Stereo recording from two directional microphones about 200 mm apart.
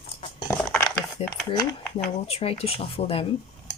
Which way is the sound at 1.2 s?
30° left (ahead or behind).